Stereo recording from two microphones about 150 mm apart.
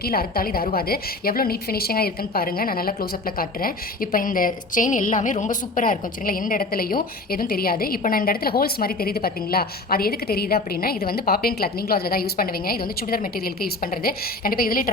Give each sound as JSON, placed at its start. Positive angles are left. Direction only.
{"t": 0.0, "sound": "a woman's voice", "side_deg": 80}